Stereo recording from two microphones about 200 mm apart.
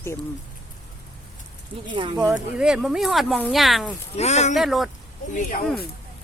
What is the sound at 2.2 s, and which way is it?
Speech, 5° right (ahead or behind).